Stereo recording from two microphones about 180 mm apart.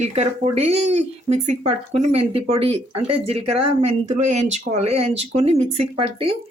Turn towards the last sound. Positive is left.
turn(degrees=-30)  # may be behind; listen again after turning